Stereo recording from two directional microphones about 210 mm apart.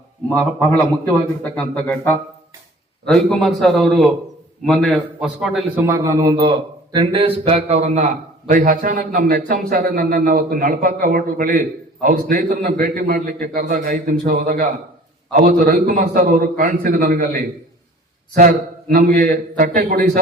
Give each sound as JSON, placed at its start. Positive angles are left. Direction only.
{"t": 1.5, "sound": "a man's voice", "side_deg": 5}
{"t": 5.8, "sound": "a man's voice", "side_deg": -15}